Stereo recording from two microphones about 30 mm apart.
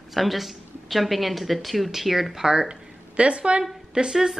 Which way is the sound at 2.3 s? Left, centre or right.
Right.